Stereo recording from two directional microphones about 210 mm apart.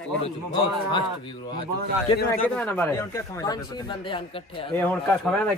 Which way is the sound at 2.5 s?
10° left (ahead or behind).